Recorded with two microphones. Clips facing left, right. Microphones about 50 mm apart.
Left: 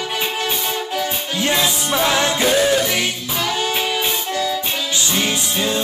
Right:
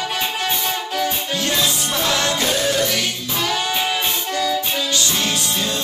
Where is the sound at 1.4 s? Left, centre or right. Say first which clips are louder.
Left 4 dB; centre.